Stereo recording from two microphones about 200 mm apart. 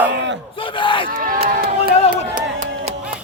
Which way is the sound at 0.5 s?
25° left (ahead or behind).